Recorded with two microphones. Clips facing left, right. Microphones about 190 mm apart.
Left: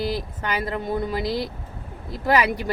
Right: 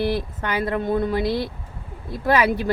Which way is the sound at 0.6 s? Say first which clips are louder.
Right 6 dB; 60° right (ahead or behind).